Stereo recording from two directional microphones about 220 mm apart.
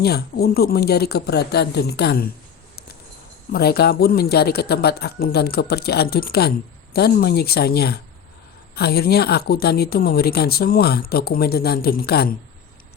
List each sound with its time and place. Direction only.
0.0 s a woman's voice: 45° left (ahead or behind)
3.5 s a woman's voice: 45° left (ahead or behind)